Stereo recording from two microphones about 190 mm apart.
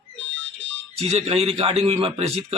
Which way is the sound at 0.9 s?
35° right (ahead or behind).